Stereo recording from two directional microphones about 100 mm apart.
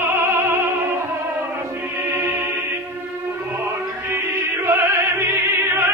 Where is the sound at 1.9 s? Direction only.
25° right (ahead or behind).